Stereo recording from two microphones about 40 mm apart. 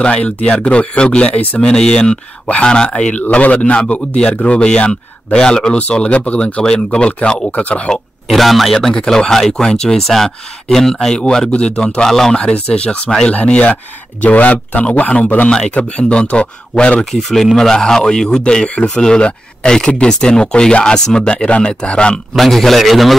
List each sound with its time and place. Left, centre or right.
0.0 s speech: left
1.6 s speech: left
3.2 s a man's voice: left; by 5.8 s centre
5.8 s a man's voice: left
8.3 s a man's voice: centre
9.5 s speech: centre
12.0 s speech: centre
12.6 s a man's voice: left
17.0 s speech: centre; by 22.2 s left
22.3 s a man's voice: centre